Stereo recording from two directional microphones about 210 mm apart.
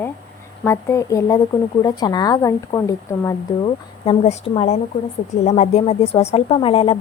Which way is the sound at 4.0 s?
30° left (ahead or behind).